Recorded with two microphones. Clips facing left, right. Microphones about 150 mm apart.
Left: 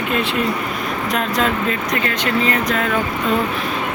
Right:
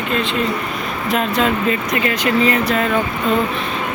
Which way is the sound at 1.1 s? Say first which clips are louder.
Right 3 dB; 5° right (ahead or behind).